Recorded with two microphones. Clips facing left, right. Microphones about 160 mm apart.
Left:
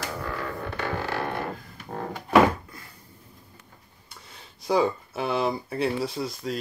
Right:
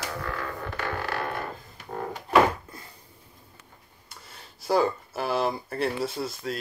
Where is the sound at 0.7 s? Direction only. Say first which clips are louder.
Left 1 dB; 25° left (ahead or behind).